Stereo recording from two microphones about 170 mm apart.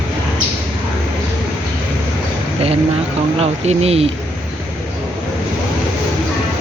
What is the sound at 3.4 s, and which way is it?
Speech, 35° right (ahead or behind).